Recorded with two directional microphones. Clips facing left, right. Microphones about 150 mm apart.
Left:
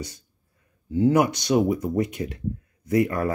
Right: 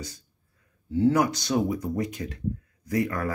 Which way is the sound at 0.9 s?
20° left (ahead or behind).